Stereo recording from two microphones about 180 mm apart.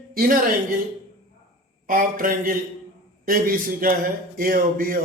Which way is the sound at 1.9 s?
50° right (ahead or behind).